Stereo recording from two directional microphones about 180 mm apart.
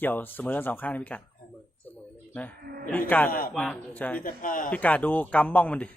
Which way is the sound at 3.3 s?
50° left (ahead or behind).